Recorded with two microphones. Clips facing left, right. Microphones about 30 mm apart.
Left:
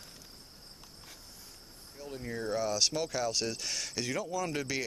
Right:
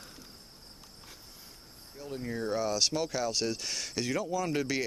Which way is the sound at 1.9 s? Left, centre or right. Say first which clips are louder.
Right 3 dB; centre.